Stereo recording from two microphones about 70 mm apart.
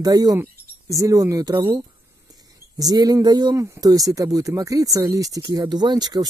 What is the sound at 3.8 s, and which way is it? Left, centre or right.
Speech, right.